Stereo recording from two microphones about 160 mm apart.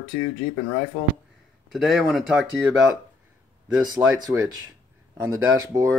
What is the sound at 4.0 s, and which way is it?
Speech, 20° right (ahead or behind).